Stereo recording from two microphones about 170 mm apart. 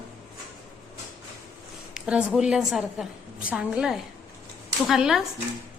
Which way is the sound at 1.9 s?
5° right (ahead or behind).